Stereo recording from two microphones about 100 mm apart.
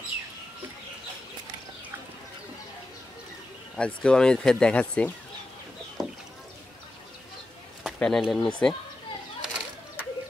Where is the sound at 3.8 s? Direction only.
10° left (ahead or behind).